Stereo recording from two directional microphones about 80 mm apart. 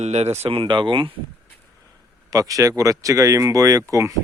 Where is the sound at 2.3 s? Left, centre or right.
Right.